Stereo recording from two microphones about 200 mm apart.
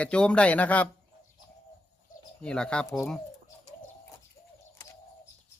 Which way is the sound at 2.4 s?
5° left (ahead or behind).